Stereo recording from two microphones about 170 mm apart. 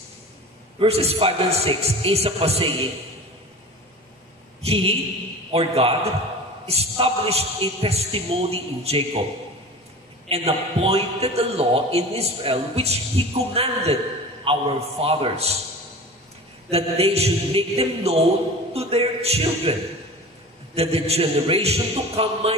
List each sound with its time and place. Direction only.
0.7 s a man's voice: 35° right (ahead or behind)
4.6 s a man's voice: 35° right (ahead or behind)
10.2 s a man's voice: 35° right (ahead or behind)
16.7 s a man's voice: 35° right (ahead or behind)
20.7 s a man's voice: 35° right (ahead or behind)